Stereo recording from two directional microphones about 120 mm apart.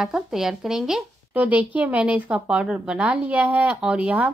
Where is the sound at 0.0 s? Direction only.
5° right (ahead or behind).